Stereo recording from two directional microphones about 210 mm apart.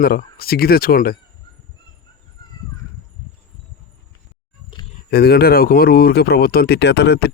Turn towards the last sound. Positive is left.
turn(degrees=50)  # may be behind; listen again after turning